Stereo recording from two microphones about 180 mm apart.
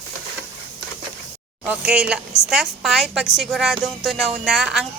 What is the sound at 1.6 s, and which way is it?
A woman's voice, 5° right (ahead or behind).